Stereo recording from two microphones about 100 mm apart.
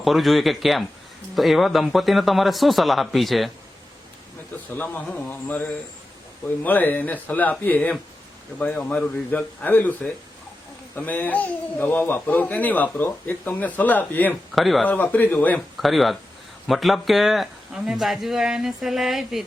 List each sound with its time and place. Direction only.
0.0 s speech: centre (ahead or behind)
4.7 s speech: 15° left (ahead or behind)
14.5 s speech: centre (ahead or behind)
15.0 s speech: 15° left (ahead or behind)
15.8 s speech: centre (ahead or behind)